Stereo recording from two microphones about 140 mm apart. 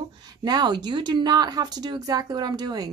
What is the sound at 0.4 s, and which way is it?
Speech, 30° right (ahead or behind).